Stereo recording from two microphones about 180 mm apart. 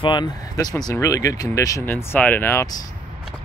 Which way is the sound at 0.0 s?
25° left (ahead or behind).